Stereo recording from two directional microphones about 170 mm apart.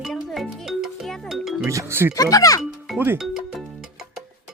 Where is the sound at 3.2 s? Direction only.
Centre (ahead or behind).